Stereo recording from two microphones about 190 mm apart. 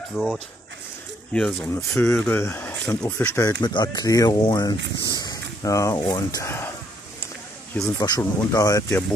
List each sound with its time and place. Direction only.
0.1 s speech: centre (ahead or behind)
1.7 s speech: 15° left (ahead or behind)
5.1 s a sound: 20° left (ahead or behind)
5.6 s speech: 15° left (ahead or behind)
7.7 s speech: 20° left (ahead or behind)